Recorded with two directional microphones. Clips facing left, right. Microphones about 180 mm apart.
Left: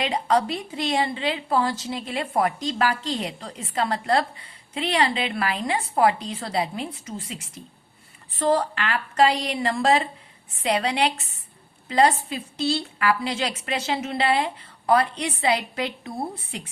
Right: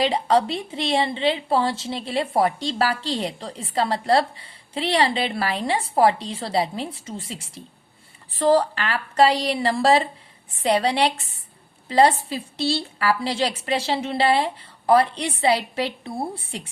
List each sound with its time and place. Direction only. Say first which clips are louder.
0.0 s a woman's voice: right 3 dB; 30° right (ahead or behind)